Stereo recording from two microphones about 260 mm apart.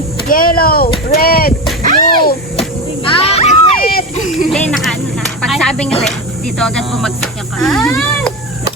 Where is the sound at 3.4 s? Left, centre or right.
Left.